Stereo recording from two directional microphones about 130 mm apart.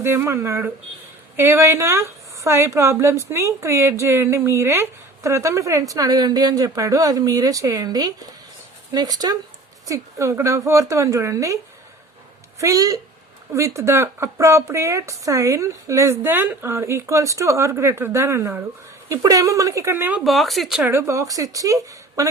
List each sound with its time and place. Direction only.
0.0 s speech: 20° right (ahead or behind)
12.5 s a woman's voice: 25° right (ahead or behind)
20.2 s speech: centre (ahead or behind)
20.8 s speech: 20° right (ahead or behind)